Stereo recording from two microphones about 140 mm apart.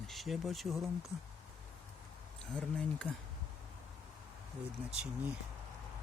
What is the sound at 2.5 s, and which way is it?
Speech, 5° left (ahead or behind).